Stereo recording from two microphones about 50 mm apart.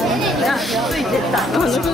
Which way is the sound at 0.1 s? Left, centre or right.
Centre.